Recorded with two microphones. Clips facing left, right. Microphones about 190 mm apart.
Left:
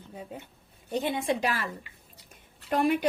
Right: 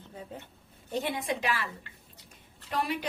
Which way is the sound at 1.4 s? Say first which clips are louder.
Left 2 dB; 40° left (ahead or behind).